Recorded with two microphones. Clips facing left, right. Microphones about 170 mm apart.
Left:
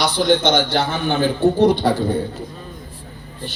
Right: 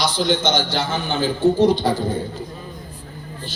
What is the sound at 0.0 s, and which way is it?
A man's voice, 60° left (ahead or behind).